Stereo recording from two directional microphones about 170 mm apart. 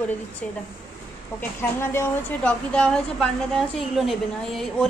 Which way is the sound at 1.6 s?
15° left (ahead or behind).